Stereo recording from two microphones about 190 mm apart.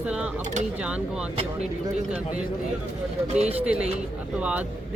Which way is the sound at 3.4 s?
30° right (ahead or behind).